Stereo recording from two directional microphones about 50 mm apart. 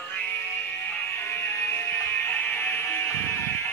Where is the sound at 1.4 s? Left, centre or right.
Left.